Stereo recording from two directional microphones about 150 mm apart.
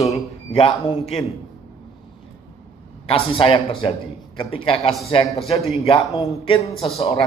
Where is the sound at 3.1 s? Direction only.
40° left (ahead or behind).